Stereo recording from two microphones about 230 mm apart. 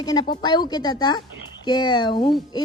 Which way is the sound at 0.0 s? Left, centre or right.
Centre.